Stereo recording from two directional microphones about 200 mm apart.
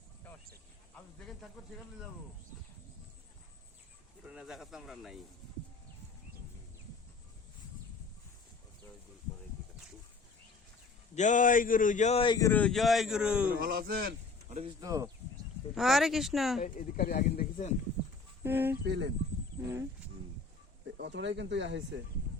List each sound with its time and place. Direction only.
1.2 s a man's voice: centre (ahead or behind)
4.3 s a man's voice: 5° right (ahead or behind)
11.1 s a man's voice: 35° left (ahead or behind)
12.5 s a man's voice: 5° left (ahead or behind)
13.5 s speech: 45° right (ahead or behind)
14.6 s speech: 15° right (ahead or behind)
15.7 s a man's voice: centre (ahead or behind)
16.6 s a man's voice: 40° left (ahead or behind)
18.4 s speech: 10° right (ahead or behind)
18.9 s speech: 65° right (ahead or behind)
21.0 s speech: 60° right (ahead or behind)